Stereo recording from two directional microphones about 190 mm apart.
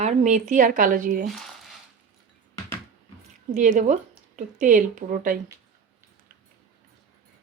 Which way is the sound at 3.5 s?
40° right (ahead or behind).